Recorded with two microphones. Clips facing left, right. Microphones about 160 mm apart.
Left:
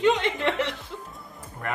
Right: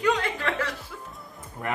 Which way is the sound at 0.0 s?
25° left (ahead or behind).